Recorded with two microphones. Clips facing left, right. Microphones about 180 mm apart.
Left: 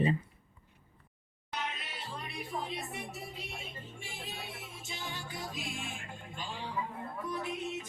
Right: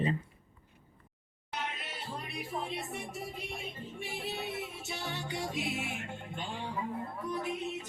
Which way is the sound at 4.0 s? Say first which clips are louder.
Right 8 dB; 65° right (ahead or behind).